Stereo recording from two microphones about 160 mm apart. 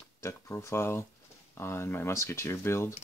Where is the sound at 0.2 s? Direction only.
15° left (ahead or behind).